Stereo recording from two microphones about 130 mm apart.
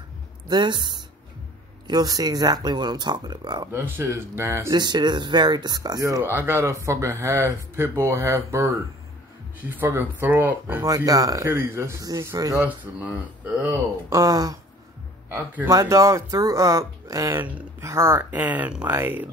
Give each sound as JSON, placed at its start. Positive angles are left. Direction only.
{"t": 0.5, "sound": "speech", "side_deg": -35}
{"t": 3.7, "sound": "speech", "side_deg": -15}
{"t": 4.7, "sound": "speech", "side_deg": -35}
{"t": 6.2, "sound": "speech", "side_deg": -15}
{"t": 11.1, "sound": "speech", "side_deg": -25}
{"t": 12.5, "sound": "speech", "side_deg": -10}
{"t": 14.1, "sound": "speech", "side_deg": -30}
{"t": 15.2, "sound": "speech", "side_deg": -15}